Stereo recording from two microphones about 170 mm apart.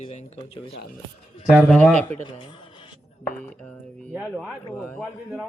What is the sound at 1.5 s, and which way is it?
Speech, 5° right (ahead or behind).